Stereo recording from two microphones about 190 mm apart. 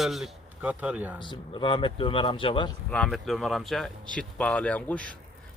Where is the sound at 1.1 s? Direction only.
25° left (ahead or behind).